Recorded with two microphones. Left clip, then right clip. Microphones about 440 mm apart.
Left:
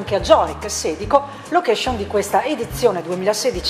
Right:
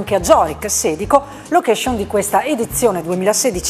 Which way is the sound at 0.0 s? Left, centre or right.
Right.